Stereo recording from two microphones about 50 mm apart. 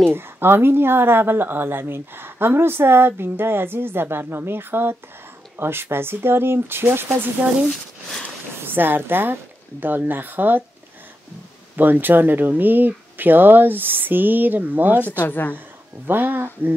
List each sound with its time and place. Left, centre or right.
0.0 s speech: right
7.4 s speech: right
11.7 s speech: right
15.0 s speech: left
16.1 s speech: right